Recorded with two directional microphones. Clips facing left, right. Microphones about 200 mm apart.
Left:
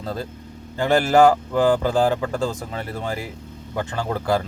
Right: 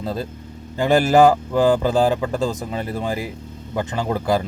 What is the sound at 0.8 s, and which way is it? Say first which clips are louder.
Speech: right 2 dB; 15° right (ahead or behind).